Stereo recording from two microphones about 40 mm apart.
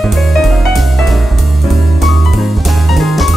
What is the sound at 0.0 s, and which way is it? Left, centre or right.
Music, centre.